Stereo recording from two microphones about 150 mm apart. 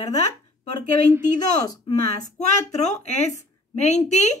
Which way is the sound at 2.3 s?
50° left (ahead or behind).